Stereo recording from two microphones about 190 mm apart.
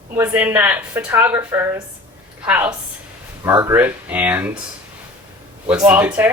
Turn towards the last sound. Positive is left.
turn(degrees=-10)  # may be behind; listen again after turning